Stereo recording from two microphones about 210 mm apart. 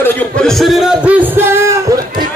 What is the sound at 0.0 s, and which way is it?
Speech, 5° left (ahead or behind).